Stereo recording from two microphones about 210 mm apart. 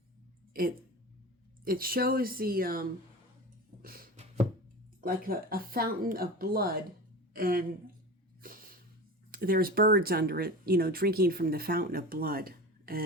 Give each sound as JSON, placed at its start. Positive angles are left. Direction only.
{"t": 0.5, "sound": "speech", "side_deg": -45}
{"t": 3.8, "sound": "a sound", "side_deg": -45}
{"t": 4.9, "sound": "speech", "side_deg": -45}
{"t": 9.3, "sound": "speech", "side_deg": -45}